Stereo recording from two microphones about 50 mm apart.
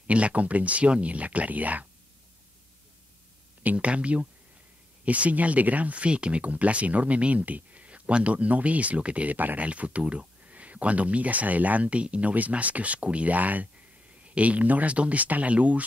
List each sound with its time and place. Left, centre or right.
0.0 s speech: right
3.6 s speech: right